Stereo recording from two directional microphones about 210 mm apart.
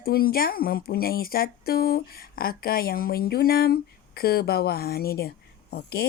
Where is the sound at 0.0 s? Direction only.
45° left (ahead or behind).